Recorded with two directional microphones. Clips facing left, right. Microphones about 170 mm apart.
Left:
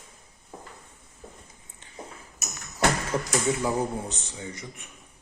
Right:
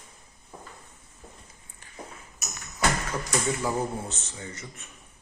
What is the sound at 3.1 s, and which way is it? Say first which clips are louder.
Speech: left 3 dB; 15° left (ahead or behind).